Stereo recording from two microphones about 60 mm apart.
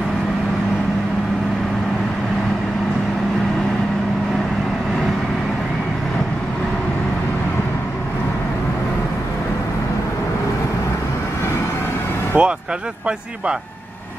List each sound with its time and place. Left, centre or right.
12.3 s vehicle: right